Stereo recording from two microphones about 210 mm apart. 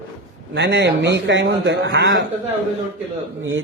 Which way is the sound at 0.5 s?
55° right (ahead or behind).